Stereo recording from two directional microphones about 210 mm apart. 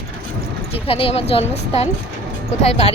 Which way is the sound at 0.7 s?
25° left (ahead or behind).